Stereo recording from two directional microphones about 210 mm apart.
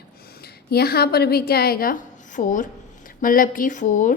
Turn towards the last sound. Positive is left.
turn(degrees=35)  # may be behind; listen again after turning